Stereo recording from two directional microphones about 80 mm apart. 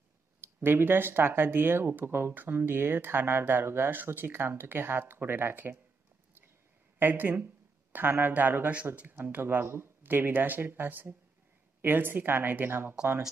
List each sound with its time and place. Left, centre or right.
0.4 s speech: right
7.0 s speech: right